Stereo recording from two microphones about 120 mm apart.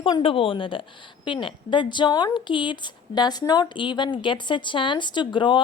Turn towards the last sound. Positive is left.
turn(degrees=40)  # may be behind; listen again after turning